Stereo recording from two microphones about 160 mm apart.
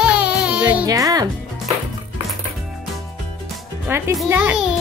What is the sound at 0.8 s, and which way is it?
Speech, 20° right (ahead or behind).